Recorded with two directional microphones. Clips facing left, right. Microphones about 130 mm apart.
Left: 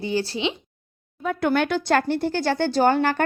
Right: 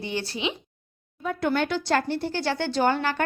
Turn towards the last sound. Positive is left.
turn(degrees=45)  # may be behind; listen again after turning